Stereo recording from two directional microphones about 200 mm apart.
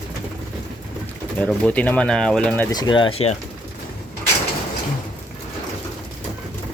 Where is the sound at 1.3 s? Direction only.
5° left (ahead or behind).